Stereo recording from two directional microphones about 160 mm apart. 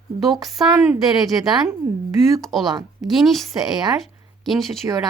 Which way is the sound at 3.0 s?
Centre (ahead or behind).